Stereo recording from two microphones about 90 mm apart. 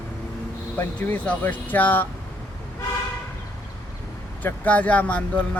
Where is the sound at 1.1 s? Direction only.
20° left (ahead or behind).